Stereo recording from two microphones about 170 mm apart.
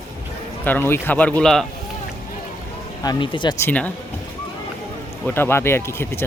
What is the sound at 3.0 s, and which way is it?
Speech, 25° left (ahead or behind).